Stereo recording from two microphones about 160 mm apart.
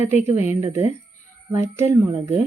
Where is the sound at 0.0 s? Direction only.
15° right (ahead or behind).